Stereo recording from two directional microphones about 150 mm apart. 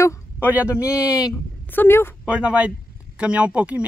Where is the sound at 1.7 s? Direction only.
15° left (ahead or behind).